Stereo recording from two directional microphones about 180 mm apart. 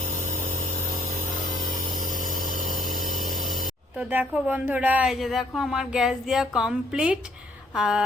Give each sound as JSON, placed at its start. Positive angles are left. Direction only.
{"t": 2.0, "sound": "a sound", "side_deg": -50}
{"t": 2.7, "sound": "power tool", "side_deg": -50}
{"t": 3.9, "sound": "speech", "side_deg": -10}